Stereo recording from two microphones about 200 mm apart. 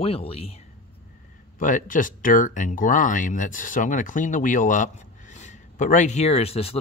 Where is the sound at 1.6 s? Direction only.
40° left (ahead or behind).